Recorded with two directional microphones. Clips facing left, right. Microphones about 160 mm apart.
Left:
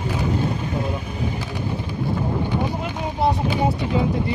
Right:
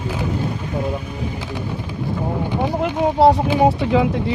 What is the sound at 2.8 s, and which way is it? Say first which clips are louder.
Speech: right 8 dB; 80° right.